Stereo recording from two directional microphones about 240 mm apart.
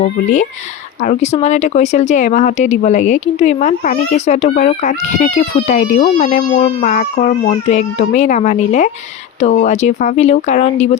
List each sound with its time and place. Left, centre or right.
0.0 s speech: left